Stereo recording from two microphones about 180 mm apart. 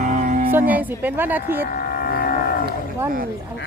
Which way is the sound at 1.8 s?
55° left (ahead or behind).